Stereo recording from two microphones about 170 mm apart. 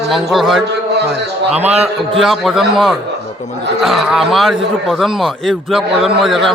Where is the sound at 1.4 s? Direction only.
40° right (ahead or behind).